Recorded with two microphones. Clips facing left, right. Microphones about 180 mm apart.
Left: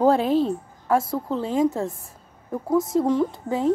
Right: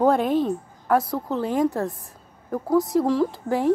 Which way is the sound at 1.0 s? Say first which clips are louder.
Even; 25° left (ahead or behind).